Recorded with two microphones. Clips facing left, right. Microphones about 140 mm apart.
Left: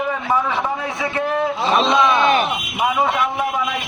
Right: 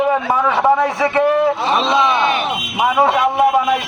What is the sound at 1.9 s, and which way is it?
Speech, 20° right (ahead or behind).